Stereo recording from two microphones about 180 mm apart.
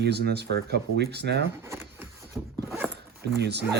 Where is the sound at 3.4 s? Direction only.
70° right (ahead or behind).